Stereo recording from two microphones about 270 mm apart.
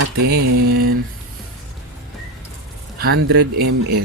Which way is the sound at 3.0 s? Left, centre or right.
Right.